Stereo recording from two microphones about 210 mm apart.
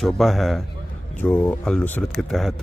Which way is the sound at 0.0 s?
Centre (ahead or behind).